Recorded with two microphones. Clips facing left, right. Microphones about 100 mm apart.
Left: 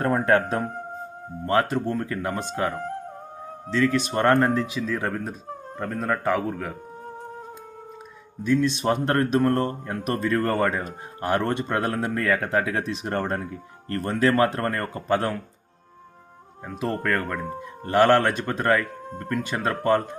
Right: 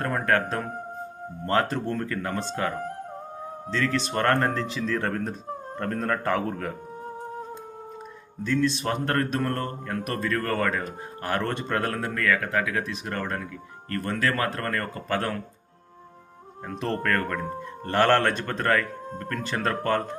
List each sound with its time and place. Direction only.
0.0 s speech: 25° left (ahead or behind)
1.5 s speech: 5° left (ahead or behind)
2.0 s speech: 15° left (ahead or behind)
8.4 s speech: 20° left (ahead or behind)
16.6 s speech: 5° left (ahead or behind)